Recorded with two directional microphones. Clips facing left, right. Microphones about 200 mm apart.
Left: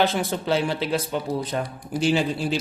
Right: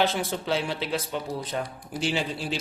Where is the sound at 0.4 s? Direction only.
45° left (ahead or behind).